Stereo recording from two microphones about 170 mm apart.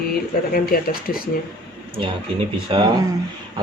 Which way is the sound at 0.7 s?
55° left (ahead or behind).